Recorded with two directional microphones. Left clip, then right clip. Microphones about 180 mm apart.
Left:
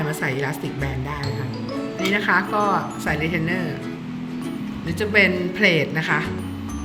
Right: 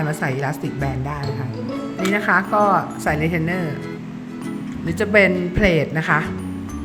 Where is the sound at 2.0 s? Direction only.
50° right (ahead or behind).